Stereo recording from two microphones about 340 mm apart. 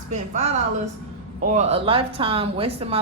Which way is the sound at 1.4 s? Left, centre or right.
Centre.